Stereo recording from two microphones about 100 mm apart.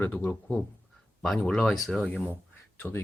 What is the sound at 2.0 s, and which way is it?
Speech, 15° left (ahead or behind).